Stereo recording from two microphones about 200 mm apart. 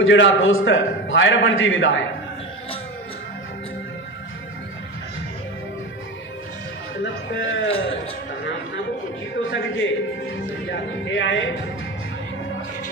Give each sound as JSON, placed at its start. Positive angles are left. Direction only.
{"t": 0.0, "sound": "a man's voice", "side_deg": 75}
{"t": 7.0, "sound": "a man's voice", "side_deg": 70}
{"t": 9.4, "sound": "a man's voice", "side_deg": 70}